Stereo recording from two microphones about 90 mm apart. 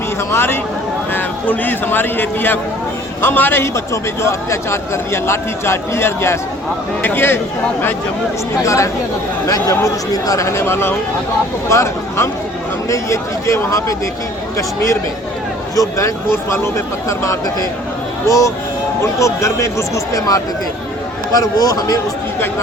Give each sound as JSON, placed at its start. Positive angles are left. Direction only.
{"t": 0.3, "sound": "a man's voice", "side_deg": 25}
{"t": 3.9, "sound": "a man's voice", "side_deg": 35}
{"t": 8.6, "sound": "speech", "side_deg": 35}
{"t": 15.7, "sound": "speech", "side_deg": 40}